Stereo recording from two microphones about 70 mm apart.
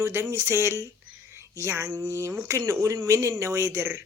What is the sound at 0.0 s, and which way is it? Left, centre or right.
A man's voice, right.